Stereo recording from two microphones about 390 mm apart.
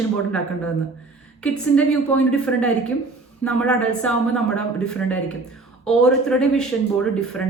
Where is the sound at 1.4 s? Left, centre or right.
Centre.